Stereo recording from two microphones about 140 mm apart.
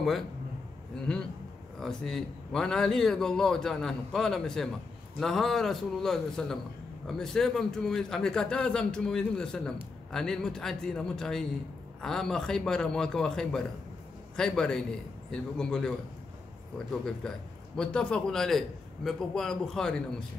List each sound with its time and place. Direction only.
1.8 s a man's voice: 5° left (ahead or behind)